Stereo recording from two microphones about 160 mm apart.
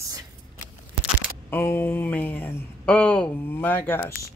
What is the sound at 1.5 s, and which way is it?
Speech, 10° left (ahead or behind).